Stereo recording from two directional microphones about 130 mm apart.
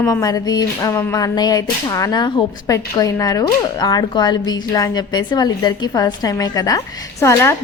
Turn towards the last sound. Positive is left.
turn(degrees=20)  # may be behind; listen again after turning